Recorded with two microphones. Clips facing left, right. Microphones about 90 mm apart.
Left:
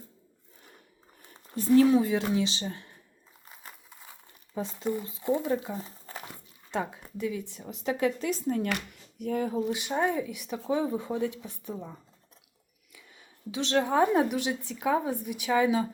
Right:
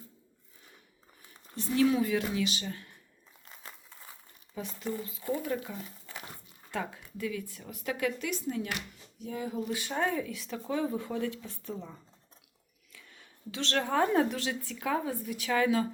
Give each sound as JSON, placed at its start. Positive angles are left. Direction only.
{"t": 1.3, "sound": "speech", "side_deg": 40}
{"t": 3.4, "sound": "a sound", "side_deg": 10}
{"t": 4.5, "sound": "speech", "side_deg": 30}
{"t": 6.7, "sound": "speech", "side_deg": 20}
{"t": 8.7, "sound": "speech", "side_deg": 65}
{"t": 9.6, "sound": "a woman's voice", "side_deg": 20}